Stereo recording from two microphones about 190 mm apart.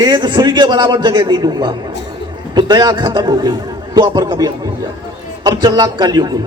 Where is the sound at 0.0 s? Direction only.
25° right (ahead or behind).